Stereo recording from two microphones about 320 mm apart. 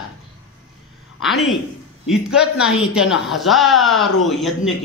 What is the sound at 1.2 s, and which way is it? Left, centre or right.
A man's voice, centre.